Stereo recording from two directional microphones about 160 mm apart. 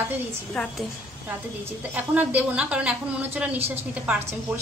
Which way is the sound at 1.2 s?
10° right (ahead or behind).